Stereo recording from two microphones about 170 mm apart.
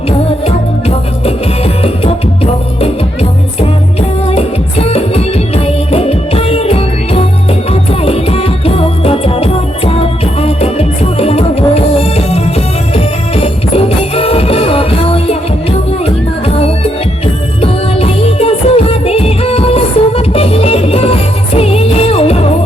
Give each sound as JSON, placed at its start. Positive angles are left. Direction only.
{"t": 0.4, "sound": "music", "side_deg": 35}
{"t": 4.3, "sound": "music", "side_deg": 35}
{"t": 17.6, "sound": "music", "side_deg": 35}